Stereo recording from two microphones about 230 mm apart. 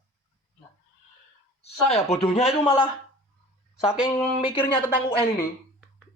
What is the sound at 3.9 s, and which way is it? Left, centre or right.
Speech, centre.